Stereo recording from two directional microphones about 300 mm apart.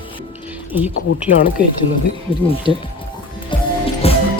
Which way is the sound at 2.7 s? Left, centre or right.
Centre.